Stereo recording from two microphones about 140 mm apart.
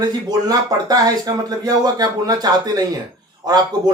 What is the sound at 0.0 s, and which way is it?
Speech, 30° right (ahead or behind).